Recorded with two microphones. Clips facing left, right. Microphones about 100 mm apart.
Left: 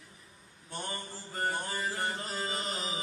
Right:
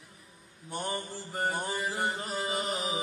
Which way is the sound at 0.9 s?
15° right (ahead or behind).